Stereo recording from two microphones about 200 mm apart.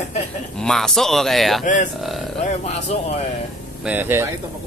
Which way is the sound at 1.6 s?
40° left (ahead or behind).